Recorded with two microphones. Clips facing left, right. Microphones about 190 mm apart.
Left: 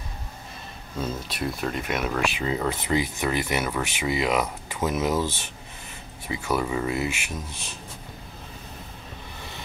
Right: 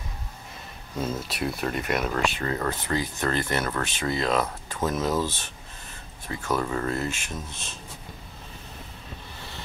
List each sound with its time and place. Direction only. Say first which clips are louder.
1.0 s speech: right 1 dB; centre (ahead or behind)